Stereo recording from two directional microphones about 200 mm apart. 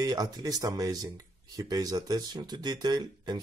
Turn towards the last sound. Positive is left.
turn(degrees=-20)  # may be behind; listen again after turning